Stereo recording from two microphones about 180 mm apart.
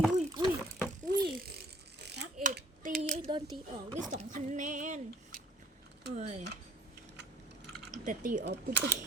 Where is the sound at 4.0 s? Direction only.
40° right (ahead or behind).